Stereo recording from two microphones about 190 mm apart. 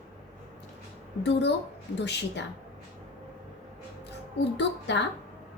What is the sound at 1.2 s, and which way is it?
Speech, 65° left (ahead or behind).